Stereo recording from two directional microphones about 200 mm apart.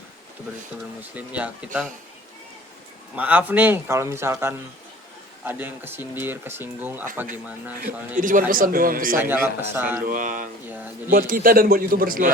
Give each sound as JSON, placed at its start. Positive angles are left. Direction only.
{"t": 1.1, "sound": "speech", "side_deg": -5}
{"t": 3.2, "sound": "speech", "side_deg": -10}
{"t": 8.2, "sound": "a man's voice", "side_deg": -40}
{"t": 9.1, "sound": "speech", "side_deg": -10}
{"t": 10.0, "sound": "speech", "side_deg": -40}
{"t": 10.7, "sound": "speech", "side_deg": -10}
{"t": 11.1, "sound": "a man's voice", "side_deg": -45}